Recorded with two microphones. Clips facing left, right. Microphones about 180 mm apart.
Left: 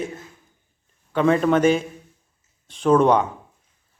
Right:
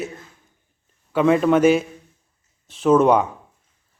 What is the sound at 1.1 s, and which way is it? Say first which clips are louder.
Speech: right 2 dB; 5° right (ahead or behind).